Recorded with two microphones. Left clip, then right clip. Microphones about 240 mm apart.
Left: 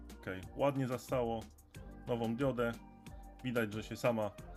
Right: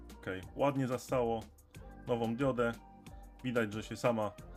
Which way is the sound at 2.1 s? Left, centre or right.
Centre.